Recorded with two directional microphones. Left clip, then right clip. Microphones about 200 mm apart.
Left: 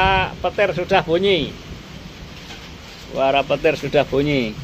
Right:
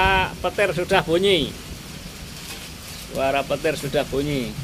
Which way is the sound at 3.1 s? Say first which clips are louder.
Left 5 dB; 20° left (ahead or behind).